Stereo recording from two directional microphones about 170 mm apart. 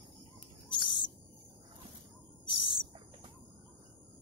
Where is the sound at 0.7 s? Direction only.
25° left (ahead or behind).